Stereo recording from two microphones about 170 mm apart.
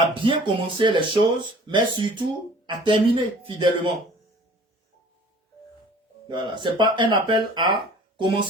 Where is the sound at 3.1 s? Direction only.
30° right (ahead or behind).